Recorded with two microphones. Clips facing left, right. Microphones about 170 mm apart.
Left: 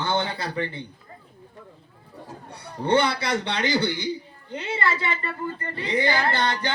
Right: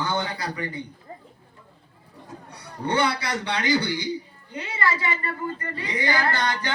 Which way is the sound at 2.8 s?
25° left (ahead or behind).